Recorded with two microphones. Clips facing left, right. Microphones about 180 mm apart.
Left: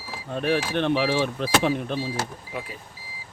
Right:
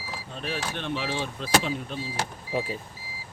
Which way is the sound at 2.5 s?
30° right (ahead or behind).